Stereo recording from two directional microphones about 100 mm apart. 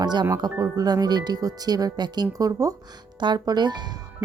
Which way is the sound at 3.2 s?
45° right (ahead or behind).